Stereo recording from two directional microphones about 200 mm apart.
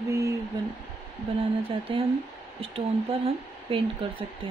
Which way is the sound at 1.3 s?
30° right (ahead or behind).